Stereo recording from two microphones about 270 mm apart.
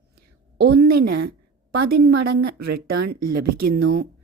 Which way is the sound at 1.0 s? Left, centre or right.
Right.